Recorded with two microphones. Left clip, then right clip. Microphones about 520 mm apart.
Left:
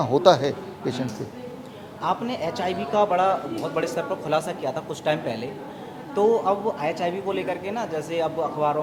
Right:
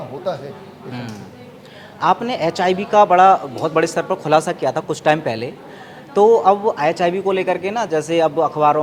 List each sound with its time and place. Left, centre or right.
0.1 s a man's voice: left
2.0 s a man's voice: right